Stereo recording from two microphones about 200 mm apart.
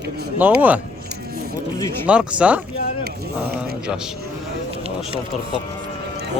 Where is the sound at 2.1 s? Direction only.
5° right (ahead or behind).